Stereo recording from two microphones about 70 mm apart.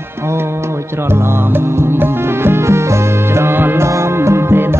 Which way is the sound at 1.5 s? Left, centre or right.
Right.